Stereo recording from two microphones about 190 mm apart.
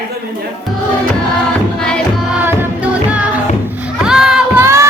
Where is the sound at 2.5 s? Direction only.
5° right (ahead or behind).